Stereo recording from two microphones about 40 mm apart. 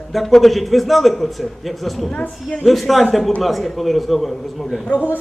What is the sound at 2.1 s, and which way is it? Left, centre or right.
Speech, left.